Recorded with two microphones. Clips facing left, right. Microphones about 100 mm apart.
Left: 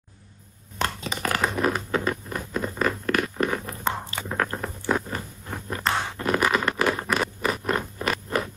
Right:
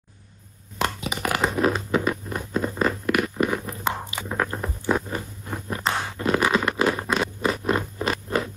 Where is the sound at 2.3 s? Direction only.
20° right (ahead or behind).